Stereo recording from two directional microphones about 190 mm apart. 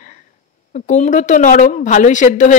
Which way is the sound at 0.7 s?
40° left (ahead or behind).